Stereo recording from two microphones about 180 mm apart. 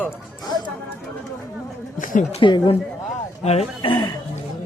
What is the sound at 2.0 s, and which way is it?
Speech, 50° left (ahead or behind).